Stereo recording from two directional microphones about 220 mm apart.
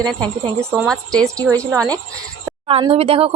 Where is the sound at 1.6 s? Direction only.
15° right (ahead or behind).